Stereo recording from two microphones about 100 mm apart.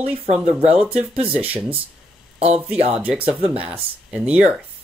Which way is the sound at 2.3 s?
90° right.